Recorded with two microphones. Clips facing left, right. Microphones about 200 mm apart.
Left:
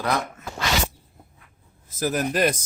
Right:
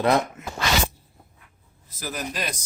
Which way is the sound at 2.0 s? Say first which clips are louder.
Left 9 dB; 50° left (ahead or behind).